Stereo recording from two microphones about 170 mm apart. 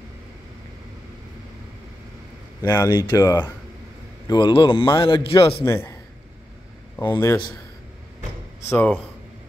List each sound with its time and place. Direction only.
2.6 s a man's voice: 15° left (ahead or behind); by 5.7 s 30° left (ahead or behind)
5.7 s speech: 15° left (ahead or behind)
7.1 s speech: 15° left (ahead or behind)
8.6 s speech: 10° left (ahead or behind)